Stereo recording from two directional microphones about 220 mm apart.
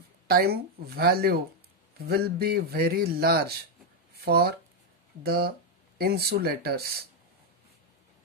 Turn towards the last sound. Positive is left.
turn(degrees=-45)  # may be behind; listen again after turning